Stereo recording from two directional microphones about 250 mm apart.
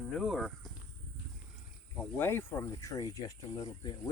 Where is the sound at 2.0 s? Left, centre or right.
Centre.